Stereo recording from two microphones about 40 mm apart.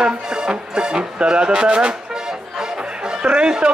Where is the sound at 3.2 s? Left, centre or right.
Right.